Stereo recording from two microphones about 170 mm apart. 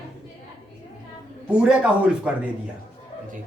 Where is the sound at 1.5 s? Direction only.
5° right (ahead or behind).